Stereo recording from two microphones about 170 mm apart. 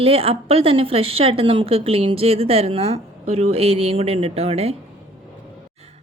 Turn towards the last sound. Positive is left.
turn(degrees=-35)  # may be behind; listen again after turning